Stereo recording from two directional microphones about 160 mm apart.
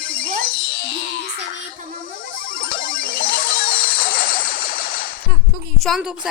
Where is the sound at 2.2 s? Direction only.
60° left (ahead or behind).